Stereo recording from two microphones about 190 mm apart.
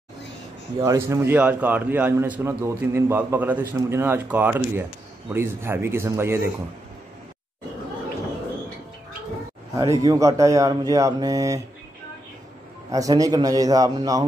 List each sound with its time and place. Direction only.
0.7 s a man's voice: 15° right (ahead or behind)
9.8 s a man's voice: 15° right (ahead or behind)
12.9 s a man's voice: 20° right (ahead or behind)